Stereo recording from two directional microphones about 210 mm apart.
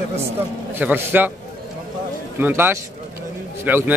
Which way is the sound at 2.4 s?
10° right (ahead or behind).